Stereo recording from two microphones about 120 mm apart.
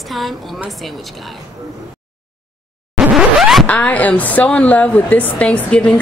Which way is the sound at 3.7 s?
10° left (ahead or behind).